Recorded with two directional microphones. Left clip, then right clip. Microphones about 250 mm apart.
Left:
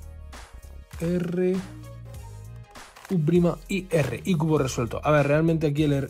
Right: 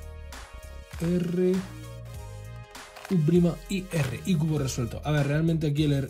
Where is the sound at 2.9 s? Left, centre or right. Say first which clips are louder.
Left 2 dB; centre.